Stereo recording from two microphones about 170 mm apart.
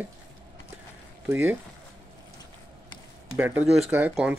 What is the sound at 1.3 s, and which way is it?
Speech, 10° right (ahead or behind).